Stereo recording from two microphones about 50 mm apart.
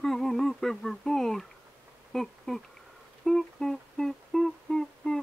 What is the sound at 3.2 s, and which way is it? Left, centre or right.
Humming, centre.